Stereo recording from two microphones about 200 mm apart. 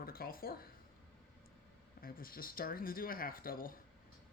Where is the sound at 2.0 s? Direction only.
45° left (ahead or behind).